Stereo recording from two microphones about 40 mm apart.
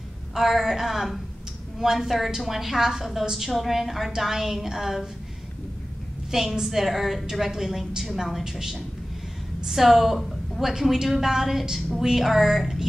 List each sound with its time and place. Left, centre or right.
0.3 s a woman's voice: centre
6.3 s a woman's voice: centre